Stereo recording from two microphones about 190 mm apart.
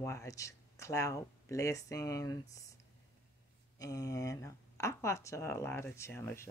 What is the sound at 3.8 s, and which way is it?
Speech, 20° left (ahead or behind).